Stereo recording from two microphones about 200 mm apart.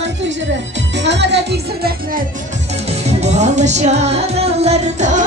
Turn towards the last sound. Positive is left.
turn(degrees=-35)  # may be behind; listen again after turning